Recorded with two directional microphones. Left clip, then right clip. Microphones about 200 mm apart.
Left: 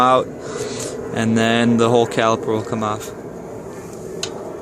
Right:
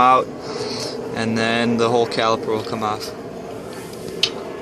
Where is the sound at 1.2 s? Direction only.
45° left (ahead or behind).